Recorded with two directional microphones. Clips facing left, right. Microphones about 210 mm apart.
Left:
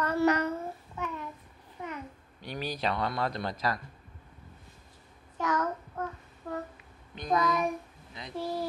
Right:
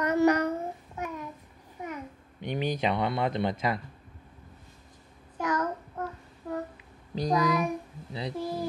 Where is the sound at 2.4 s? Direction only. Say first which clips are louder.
Right 6 dB; 20° right (ahead or behind).